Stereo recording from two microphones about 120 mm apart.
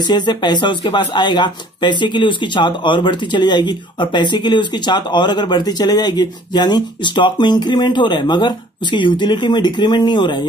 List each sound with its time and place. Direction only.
0.0 s speech: 35° left (ahead or behind)